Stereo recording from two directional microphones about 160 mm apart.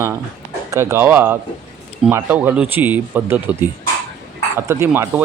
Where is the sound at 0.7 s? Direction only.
15° right (ahead or behind).